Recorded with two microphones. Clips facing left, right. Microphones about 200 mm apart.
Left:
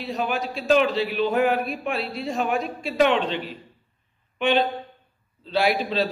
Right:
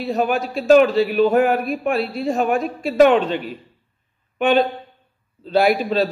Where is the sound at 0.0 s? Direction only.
50° right (ahead or behind).